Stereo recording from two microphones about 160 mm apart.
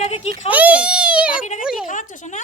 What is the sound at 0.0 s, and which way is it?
Speech, 45° left (ahead or behind).